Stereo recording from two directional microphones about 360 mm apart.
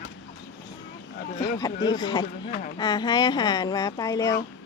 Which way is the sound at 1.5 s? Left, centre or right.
Centre.